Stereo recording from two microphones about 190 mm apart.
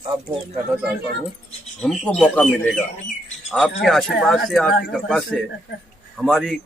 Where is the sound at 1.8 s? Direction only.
5° left (ahead or behind).